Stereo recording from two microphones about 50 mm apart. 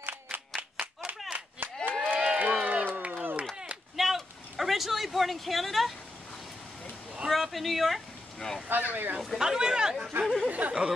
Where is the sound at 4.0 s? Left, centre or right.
Centre.